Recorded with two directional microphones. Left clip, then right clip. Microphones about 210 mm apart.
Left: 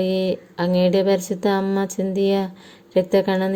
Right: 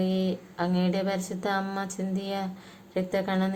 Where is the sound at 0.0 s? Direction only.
35° left (ahead or behind).